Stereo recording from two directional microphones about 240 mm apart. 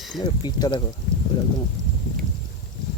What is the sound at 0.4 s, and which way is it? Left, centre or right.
Speech, centre.